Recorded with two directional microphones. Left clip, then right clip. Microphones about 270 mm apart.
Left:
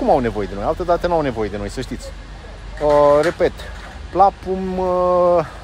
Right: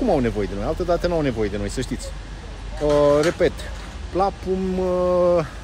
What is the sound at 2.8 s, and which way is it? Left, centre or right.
Speech, centre.